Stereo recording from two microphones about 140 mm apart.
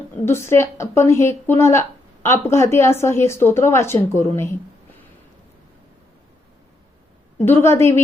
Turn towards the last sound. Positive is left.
turn(degrees=20)  # may be behind; listen again after turning